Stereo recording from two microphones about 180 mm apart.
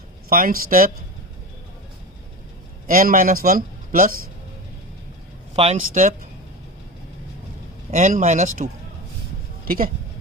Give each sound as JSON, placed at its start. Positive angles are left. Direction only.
{"t": 0.3, "sound": "speech", "side_deg": -50}
{"t": 2.8, "sound": "a man's voice", "side_deg": -50}
{"t": 5.6, "sound": "speech", "side_deg": -30}
{"t": 5.9, "sound": "speech", "side_deg": -45}
{"t": 7.9, "sound": "speech", "side_deg": -45}
{"t": 9.6, "sound": "speech", "side_deg": -55}